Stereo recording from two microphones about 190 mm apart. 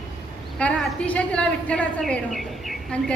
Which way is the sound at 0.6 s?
5° left (ahead or behind).